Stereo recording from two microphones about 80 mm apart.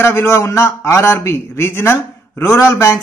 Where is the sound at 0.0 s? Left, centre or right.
Left.